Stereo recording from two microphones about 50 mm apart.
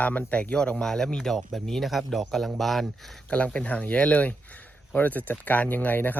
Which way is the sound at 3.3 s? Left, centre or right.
Left.